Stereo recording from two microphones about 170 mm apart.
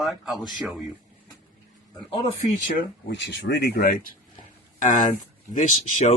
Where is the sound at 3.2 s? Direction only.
90° left; by 3.9 s 65° left (ahead or behind).